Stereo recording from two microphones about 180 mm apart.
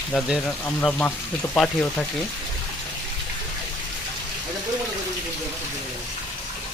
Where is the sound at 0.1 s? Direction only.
5° left (ahead or behind).